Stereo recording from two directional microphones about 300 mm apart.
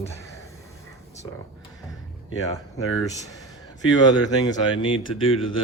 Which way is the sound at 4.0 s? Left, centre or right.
Centre.